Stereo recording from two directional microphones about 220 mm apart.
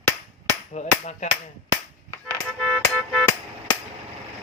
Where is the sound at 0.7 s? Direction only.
30° left (ahead or behind).